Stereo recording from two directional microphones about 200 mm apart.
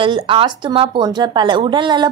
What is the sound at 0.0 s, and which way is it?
A woman's voice, 25° right (ahead or behind).